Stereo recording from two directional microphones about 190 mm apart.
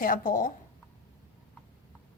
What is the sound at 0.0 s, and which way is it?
Speech, 45° left (ahead or behind).